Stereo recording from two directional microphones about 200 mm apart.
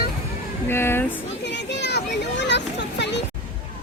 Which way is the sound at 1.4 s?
60° left (ahead or behind).